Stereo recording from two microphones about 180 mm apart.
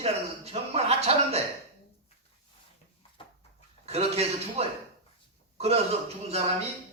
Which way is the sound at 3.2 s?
30° left (ahead or behind).